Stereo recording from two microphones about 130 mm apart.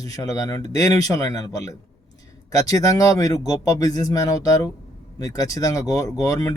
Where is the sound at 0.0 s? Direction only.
25° left (ahead or behind).